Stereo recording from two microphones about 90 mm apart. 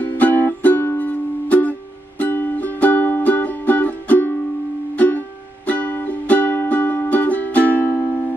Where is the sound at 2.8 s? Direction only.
20° left (ahead or behind).